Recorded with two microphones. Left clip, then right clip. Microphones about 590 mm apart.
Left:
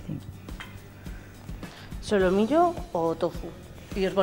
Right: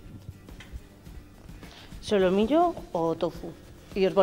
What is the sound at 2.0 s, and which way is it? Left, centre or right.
Speech, centre.